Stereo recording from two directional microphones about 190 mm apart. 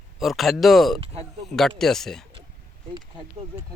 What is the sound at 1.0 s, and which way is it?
Speech, 35° right (ahead or behind).